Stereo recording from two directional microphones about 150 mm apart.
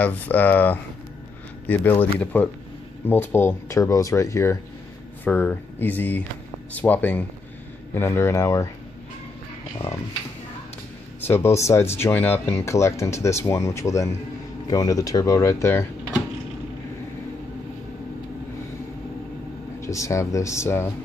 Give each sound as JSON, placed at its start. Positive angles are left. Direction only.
{"t": 0.0, "sound": "speech", "side_deg": 10}
{"t": 11.2, "sound": "speech", "side_deg": 15}
{"t": 19.8, "sound": "speech", "side_deg": 20}